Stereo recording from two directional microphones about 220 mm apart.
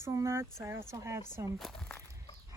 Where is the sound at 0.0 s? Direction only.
15° right (ahead or behind).